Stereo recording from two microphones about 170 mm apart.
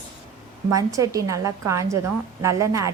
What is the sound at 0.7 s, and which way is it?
A woman's voice, 20° right (ahead or behind).